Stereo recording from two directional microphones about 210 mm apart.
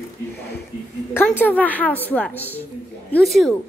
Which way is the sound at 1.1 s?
10° left (ahead or behind).